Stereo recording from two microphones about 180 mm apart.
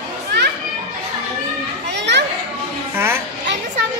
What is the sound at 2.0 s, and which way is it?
Children playing, 75° right (ahead or behind).